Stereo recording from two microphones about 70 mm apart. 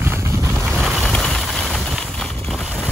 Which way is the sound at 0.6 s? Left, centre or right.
Centre.